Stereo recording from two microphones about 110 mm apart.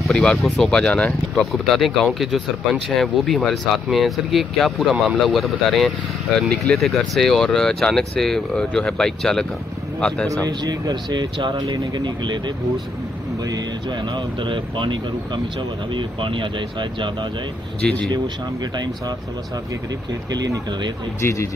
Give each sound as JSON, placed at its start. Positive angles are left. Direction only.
{"t": 0.0, "sound": "speech", "side_deg": 10}
{"t": 2.0, "sound": "speech", "side_deg": -5}
{"t": 10.3, "sound": "speech", "side_deg": -35}
{"t": 17.8, "sound": "speech", "side_deg": 10}
{"t": 20.2, "sound": "speech", "side_deg": -35}
{"t": 21.2, "sound": "speech", "side_deg": 25}